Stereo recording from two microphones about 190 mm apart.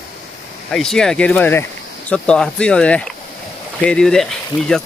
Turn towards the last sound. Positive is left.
turn(degrees=0)  # may be behind; listen again after turning